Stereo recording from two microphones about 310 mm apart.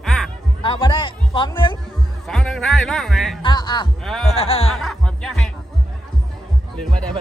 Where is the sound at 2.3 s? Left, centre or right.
Centre.